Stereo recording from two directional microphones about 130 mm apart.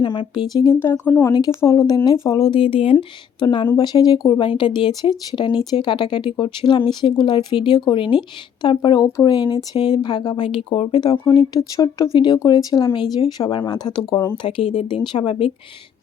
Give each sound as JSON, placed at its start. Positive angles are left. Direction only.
{"t": 0.0, "sound": "speech", "side_deg": 40}
{"t": 0.6, "sound": "speech", "side_deg": 20}
{"t": 2.5, "sound": "speech", "side_deg": 45}
{"t": 14.4, "sound": "speech", "side_deg": 50}
{"t": 14.8, "sound": "speech", "side_deg": 40}